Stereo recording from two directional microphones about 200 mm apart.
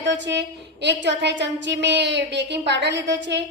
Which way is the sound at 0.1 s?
60° right (ahead or behind).